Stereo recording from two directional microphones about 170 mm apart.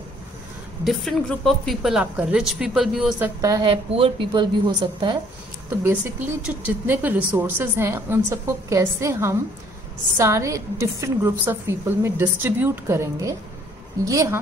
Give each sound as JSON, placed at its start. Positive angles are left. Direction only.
{"t": 0.8, "sound": "a woman's voice", "side_deg": 0}
{"t": 3.3, "sound": "a woman's voice", "side_deg": -20}
{"t": 5.9, "sound": "a woman's voice", "side_deg": -10}